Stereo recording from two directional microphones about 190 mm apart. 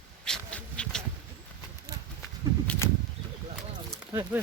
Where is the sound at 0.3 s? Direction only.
5° left (ahead or behind).